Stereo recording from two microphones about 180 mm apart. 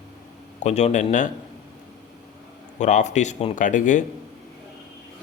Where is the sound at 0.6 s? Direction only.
40° left (ahead or behind).